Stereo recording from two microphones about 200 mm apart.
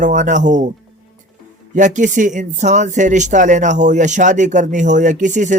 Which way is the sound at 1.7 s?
40° right (ahead or behind).